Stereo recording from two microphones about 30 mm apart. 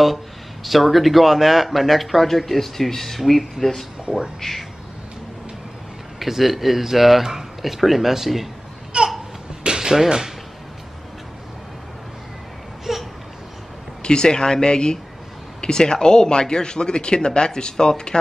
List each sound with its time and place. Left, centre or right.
0.7 s speech: centre
6.1 s speech: centre
8.9 s a sound: right
10.0 s speech: right
12.9 s babbling: centre
14.0 s speech: left